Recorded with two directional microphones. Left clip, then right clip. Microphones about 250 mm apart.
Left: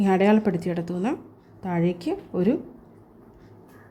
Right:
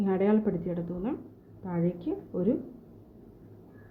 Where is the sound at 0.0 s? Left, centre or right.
Left.